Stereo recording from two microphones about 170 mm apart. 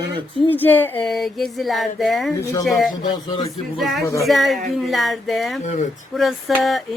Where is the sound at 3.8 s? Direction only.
Centre (ahead or behind).